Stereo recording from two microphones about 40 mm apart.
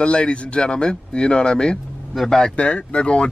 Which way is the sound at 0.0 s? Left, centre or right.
Left.